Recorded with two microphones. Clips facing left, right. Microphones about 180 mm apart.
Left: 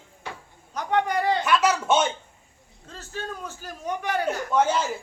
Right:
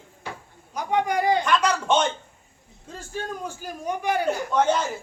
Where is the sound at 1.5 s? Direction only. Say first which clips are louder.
Even; 5° left (ahead or behind).